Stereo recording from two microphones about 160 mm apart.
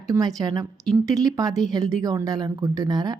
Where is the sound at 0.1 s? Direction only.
20° right (ahead or behind).